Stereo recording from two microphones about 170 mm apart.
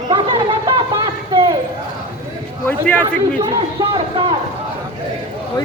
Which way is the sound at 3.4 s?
25° right (ahead or behind).